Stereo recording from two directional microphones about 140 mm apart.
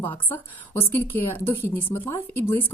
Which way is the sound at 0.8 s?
15° left (ahead or behind).